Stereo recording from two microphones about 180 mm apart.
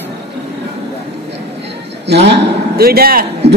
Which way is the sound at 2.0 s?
70° right (ahead or behind).